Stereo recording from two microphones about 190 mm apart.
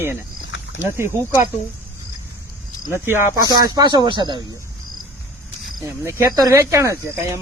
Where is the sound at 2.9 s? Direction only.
10° right (ahead or behind).